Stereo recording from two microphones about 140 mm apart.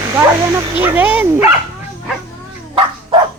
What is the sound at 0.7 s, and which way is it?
Speech, 10° right (ahead or behind).